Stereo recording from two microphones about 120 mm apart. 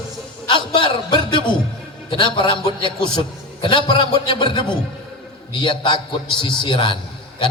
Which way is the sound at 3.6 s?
45° left (ahead or behind).